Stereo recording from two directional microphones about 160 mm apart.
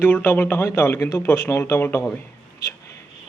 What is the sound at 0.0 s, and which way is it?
Speech, 10° left (ahead or behind).